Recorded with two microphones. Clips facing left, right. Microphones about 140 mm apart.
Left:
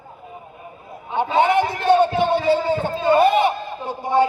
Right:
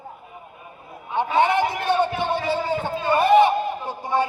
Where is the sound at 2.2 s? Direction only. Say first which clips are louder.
Left 6 dB; 20° left (ahead or behind).